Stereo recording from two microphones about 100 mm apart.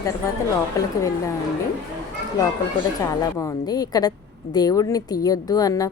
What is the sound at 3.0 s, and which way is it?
A woman's voice, 40° left (ahead or behind).